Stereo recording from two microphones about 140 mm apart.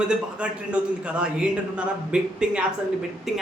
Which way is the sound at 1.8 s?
5° right (ahead or behind).